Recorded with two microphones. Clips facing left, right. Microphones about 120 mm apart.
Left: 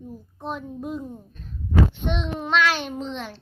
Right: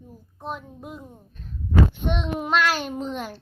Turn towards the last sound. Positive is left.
turn(degrees=-5)  # may be behind; listen again after turning